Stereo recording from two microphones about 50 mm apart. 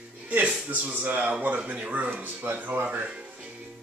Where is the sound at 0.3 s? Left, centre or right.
Right.